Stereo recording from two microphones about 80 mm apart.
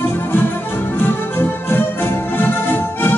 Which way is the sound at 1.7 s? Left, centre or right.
Left.